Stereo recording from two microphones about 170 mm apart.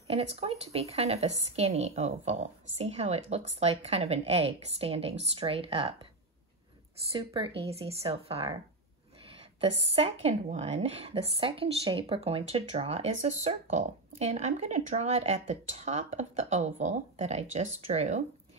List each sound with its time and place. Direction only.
0.1 s speech: 35° right (ahead or behind)
7.3 s speech: 30° right (ahead or behind)